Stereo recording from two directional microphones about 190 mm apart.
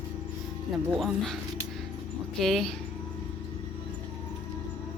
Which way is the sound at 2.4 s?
Centre (ahead or behind).